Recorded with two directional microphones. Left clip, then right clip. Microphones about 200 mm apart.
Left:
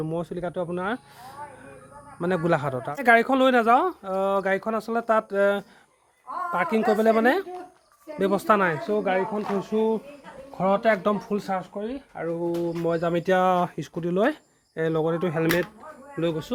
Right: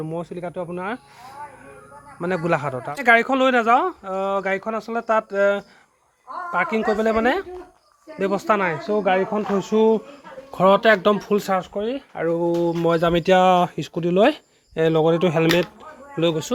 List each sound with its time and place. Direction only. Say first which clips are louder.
0.0 s speech: even; 10° left (ahead or behind)
8.8 s speech: right 3 dB; 25° right (ahead or behind)
9.0 s speech: right 5 dB; 45° right (ahead or behind)
10.6 s speech: right 7 dB; 30° right (ahead or behind)